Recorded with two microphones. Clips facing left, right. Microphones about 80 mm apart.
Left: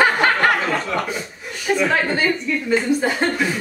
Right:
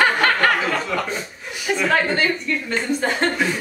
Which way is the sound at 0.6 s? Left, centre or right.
Centre.